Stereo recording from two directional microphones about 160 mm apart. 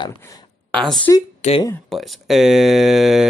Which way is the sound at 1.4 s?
45° left (ahead or behind).